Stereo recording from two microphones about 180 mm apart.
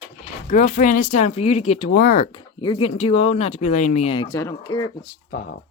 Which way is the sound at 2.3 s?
25° left (ahead or behind).